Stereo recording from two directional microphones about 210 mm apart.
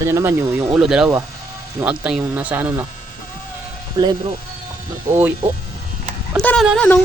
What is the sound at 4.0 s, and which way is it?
Speech, 15° right (ahead or behind).